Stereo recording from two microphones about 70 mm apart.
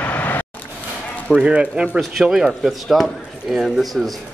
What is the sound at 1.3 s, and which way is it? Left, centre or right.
Speech, centre.